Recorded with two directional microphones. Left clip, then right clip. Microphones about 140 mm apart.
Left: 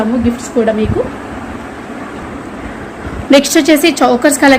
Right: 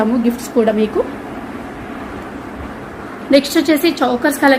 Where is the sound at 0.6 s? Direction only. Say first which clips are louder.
Left 2 dB; 35° right (ahead or behind).